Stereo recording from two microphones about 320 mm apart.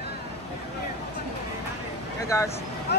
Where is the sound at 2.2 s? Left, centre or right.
Centre.